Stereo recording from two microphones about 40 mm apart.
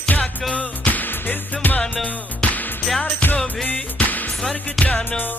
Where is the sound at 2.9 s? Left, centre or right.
Left.